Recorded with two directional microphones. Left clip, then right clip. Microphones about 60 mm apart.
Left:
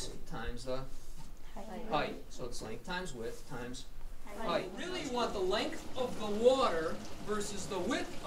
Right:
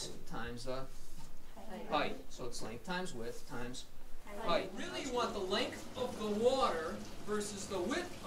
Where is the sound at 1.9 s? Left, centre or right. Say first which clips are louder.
Left 1 dB; centre.